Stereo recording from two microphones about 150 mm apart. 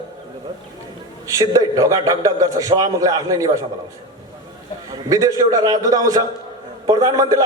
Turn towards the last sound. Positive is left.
turn(degrees=-25)  # may be behind; listen again after turning